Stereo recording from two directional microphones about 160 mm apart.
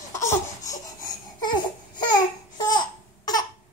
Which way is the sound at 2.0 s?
25° left (ahead or behind).